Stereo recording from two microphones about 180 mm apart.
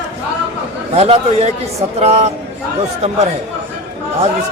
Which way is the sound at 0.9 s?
35° right (ahead or behind).